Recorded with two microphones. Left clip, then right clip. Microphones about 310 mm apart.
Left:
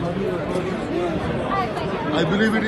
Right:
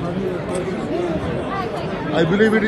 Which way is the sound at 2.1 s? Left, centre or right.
Centre.